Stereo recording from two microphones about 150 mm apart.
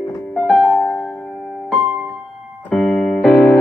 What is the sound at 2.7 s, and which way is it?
Keyboard, 5° left (ahead or behind).